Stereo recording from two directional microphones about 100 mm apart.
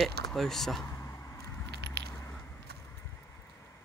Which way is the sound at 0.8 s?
30° left (ahead or behind).